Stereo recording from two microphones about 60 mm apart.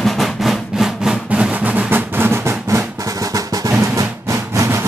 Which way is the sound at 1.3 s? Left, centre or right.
Right.